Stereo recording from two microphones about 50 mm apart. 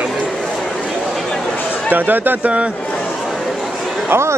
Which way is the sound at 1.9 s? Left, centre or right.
Right.